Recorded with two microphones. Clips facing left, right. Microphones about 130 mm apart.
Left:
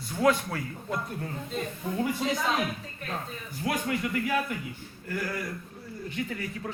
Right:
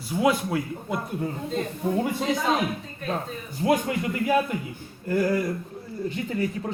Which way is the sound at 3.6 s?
25° right (ahead or behind).